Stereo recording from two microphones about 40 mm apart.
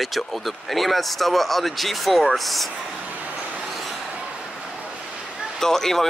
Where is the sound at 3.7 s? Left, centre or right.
Centre.